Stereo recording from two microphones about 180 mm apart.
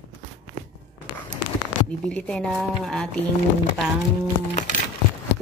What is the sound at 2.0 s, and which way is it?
Speech, 5° left (ahead or behind).